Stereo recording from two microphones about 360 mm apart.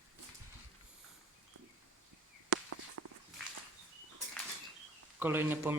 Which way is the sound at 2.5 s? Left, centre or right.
Right.